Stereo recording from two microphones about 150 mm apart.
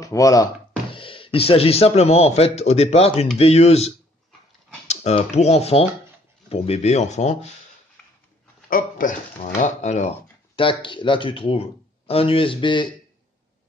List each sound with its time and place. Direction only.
0.0 s speech: 20° left (ahead or behind)
0.9 s a man's voice: 35° left (ahead or behind)
8.6 s speech: 65° left (ahead or behind); by 10.1 s 50° left (ahead or behind)
10.5 s speech: 35° left (ahead or behind)